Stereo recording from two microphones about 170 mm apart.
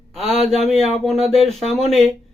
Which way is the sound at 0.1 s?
Centre (ahead or behind).